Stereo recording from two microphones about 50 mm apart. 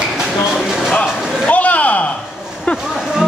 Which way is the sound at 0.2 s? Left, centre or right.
Centre.